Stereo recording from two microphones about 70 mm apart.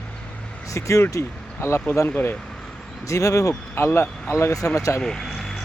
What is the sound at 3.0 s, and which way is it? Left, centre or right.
Speech, left.